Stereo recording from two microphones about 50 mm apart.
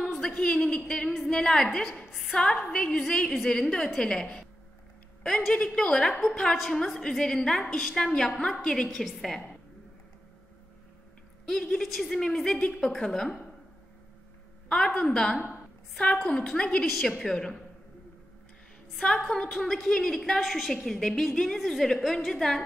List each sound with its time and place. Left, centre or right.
0.0 s a sound: centre
0.4 s a woman's voice: centre
2.0 s a sound: centre
2.3 s a woman's voice: centre
5.5 s a woman's voice: centre
11.4 s a woman's voice: centre
12.2 s a woman's voice: centre
14.7 s a woman's voice: centre
16.8 s a woman's voice: centre
17.2 s a woman's voice: centre
19.0 s a woman's voice: centre